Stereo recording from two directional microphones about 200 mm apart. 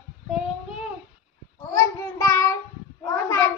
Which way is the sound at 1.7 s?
15° left (ahead or behind).